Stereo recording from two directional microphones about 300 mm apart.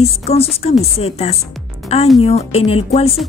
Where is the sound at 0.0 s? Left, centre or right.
Centre.